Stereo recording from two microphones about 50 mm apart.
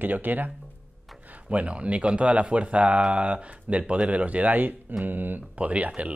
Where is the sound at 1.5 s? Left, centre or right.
Right.